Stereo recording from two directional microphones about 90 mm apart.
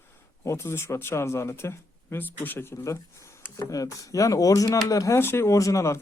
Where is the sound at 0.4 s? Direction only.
30° left (ahead or behind).